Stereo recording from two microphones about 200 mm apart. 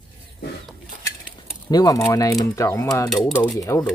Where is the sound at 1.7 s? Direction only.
20° left (ahead or behind).